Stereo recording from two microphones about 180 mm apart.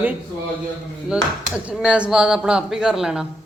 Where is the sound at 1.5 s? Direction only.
5° right (ahead or behind).